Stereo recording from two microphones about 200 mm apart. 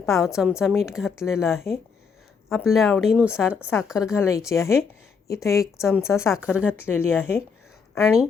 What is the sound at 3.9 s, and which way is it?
Speech, 15° left (ahead or behind).